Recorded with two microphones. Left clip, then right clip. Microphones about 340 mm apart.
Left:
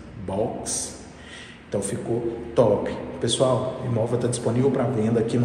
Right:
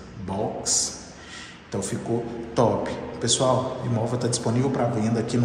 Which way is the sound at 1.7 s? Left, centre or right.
Centre.